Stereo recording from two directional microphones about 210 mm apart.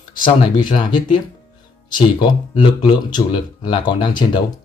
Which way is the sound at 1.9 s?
20° left (ahead or behind).